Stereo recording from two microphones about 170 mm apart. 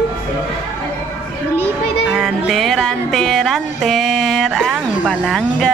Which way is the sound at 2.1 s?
Centre (ahead or behind).